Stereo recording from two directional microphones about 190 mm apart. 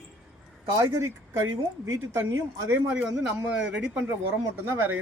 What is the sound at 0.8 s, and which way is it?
Speech, 15° right (ahead or behind).